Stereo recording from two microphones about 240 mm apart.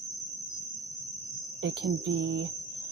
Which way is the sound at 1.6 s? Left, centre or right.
Right.